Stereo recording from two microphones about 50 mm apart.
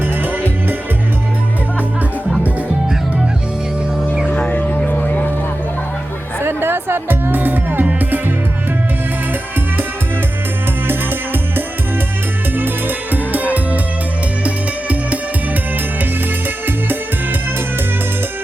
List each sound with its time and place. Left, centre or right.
4.5 s vehicle: left
6.4 s music: right
10.8 s music: right
14.4 s music: right